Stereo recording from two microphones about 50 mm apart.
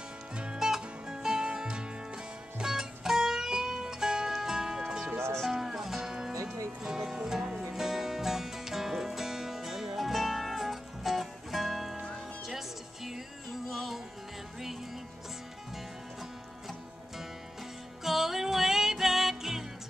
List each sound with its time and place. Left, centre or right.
0.4 s music: centre
5.1 s music: right
5.5 s music: centre
18.0 s music: centre